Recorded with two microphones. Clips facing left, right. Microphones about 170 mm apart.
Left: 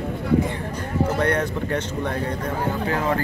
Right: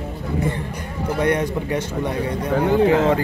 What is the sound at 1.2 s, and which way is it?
Speech, 15° right (ahead or behind).